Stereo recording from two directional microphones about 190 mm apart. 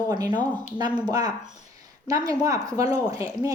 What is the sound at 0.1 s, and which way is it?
Speech, 20° right (ahead or behind).